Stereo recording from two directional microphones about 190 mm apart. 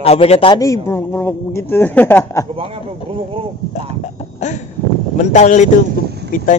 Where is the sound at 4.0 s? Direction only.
40° left (ahead or behind).